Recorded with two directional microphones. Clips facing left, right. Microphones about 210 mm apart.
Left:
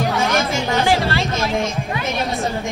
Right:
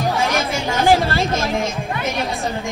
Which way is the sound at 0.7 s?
45° right (ahead or behind).